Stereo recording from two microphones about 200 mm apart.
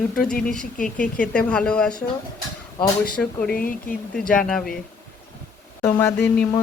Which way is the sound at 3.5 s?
45° left (ahead or behind).